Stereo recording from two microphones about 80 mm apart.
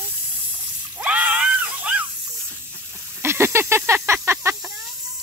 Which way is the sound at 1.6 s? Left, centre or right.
Centre.